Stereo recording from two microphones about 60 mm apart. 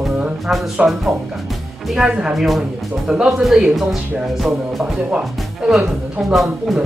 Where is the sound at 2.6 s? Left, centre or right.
Centre.